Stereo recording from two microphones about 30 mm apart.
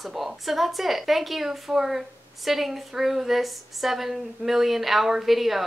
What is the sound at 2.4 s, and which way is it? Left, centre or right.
A woman's voice, centre.